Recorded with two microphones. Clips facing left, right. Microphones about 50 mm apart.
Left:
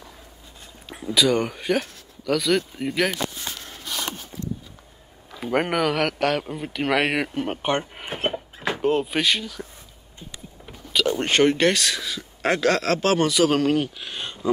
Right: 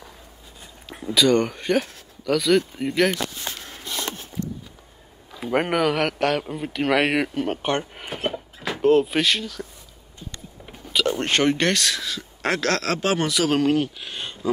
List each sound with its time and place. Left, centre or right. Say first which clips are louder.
0.8 s speech: right 1 dB; centre
5.3 s speech: right 1 dB; centre
8.1 s a sound: left 1 dB; left
8.8 s speech: right 4 dB; centre
10.9 s speech: even; centre